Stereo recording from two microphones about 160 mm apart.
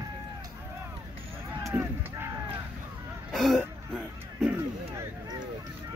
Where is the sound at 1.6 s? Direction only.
15° right (ahead or behind).